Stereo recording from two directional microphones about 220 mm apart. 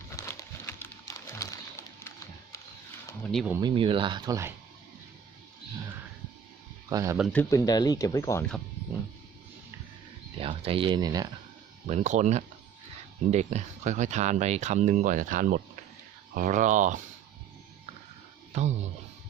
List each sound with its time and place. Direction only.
0.2 s a sound: 15° left (ahead or behind)
3.3 s speech: 5° right (ahead or behind)
3.6 s speech: 20° right (ahead or behind)
6.9 s speech: 15° right (ahead or behind)
7.5 s speech: 15° left (ahead or behind)
10.4 s speech: 25° right (ahead or behind)
11.9 s speech: 30° right (ahead or behind)
18.5 s speech: 30° right (ahead or behind)